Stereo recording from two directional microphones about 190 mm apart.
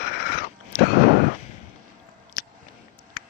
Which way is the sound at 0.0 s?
55° left (ahead or behind).